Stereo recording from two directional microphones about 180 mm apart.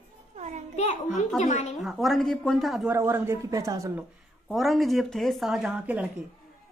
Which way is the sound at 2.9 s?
15° right (ahead or behind).